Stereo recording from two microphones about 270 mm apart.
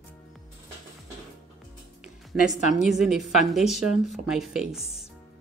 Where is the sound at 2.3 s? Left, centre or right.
Centre.